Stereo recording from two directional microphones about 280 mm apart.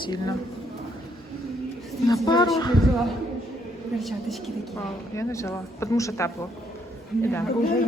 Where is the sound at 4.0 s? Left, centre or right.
Centre.